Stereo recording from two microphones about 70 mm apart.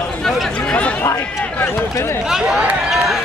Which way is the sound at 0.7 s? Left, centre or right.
Centre.